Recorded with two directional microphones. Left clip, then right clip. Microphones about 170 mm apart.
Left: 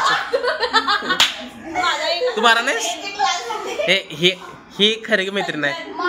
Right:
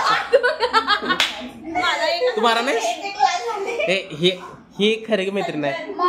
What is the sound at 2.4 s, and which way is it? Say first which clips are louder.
A man's voice: left 5 dB; centre (ahead or behind).